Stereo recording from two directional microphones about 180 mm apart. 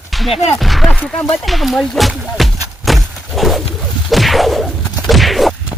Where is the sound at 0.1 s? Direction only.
Centre (ahead or behind).